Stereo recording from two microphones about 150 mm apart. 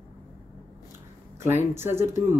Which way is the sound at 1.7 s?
15° right (ahead or behind).